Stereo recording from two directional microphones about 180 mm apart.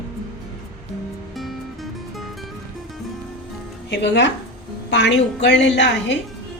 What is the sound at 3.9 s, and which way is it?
A woman's voice, 70° left (ahead or behind).